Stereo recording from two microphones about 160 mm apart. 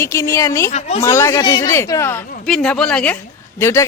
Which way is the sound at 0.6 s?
45° left (ahead or behind).